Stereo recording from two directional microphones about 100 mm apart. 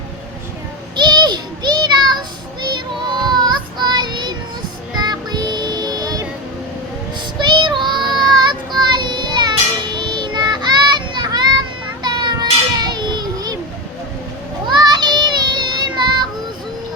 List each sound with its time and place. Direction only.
0.9 s child singing: 50° right (ahead or behind)
7.4 s child singing: 50° right (ahead or behind)
12.0 s children playing: 45° right (ahead or behind)
14.8 s child singing: 45° right (ahead or behind)